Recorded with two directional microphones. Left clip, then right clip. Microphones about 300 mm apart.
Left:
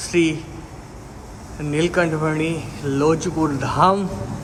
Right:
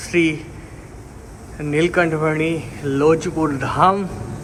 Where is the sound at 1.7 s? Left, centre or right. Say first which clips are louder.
Right 2 dB; centre.